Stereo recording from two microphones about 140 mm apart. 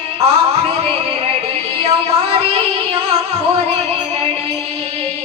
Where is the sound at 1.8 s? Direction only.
45° right (ahead or behind).